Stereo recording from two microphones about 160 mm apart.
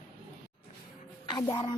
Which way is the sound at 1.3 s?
25° left (ahead or behind).